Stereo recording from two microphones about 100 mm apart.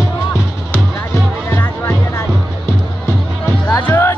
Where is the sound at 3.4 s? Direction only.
20° left (ahead or behind).